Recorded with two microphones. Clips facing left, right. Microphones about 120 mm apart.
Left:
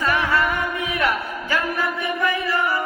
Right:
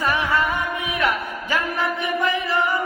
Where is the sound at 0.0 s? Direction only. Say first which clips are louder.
Left 1 dB; 15° right (ahead or behind).